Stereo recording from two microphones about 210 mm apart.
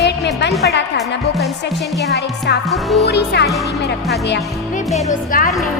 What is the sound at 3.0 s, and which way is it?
Speech, 55° left (ahead or behind).